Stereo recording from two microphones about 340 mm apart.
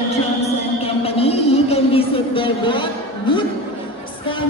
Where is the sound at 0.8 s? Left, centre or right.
Centre.